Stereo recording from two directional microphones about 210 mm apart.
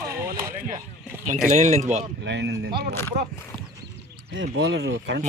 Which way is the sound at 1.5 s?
30° right (ahead or behind).